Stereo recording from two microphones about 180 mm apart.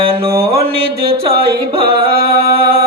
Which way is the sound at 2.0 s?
60° right (ahead or behind).